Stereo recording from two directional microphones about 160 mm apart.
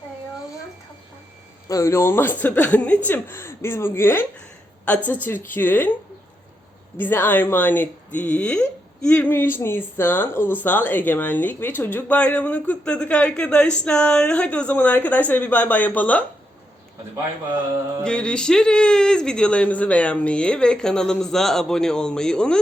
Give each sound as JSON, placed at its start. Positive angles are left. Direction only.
{"t": 1.6, "sound": "speech", "side_deg": 20}
{"t": 6.9, "sound": "speech", "side_deg": 10}
{"t": 18.0, "sound": "speech", "side_deg": 5}